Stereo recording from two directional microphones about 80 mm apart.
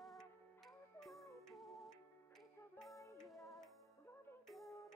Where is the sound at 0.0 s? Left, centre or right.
Centre.